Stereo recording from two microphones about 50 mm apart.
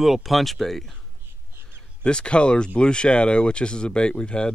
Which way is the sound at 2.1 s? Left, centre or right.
Centre.